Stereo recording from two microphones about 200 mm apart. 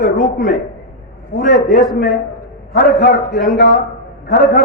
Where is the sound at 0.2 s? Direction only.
45° left (ahead or behind).